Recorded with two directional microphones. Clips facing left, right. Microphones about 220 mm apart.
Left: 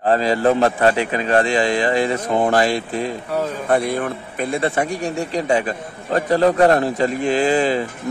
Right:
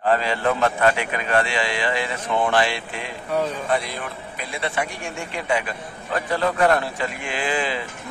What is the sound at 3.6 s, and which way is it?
Speech, 55° left (ahead or behind).